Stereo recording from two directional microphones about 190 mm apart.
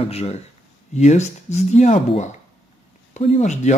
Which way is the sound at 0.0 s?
35° left (ahead or behind).